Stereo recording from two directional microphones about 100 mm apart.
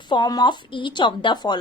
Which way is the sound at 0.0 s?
50° left (ahead or behind).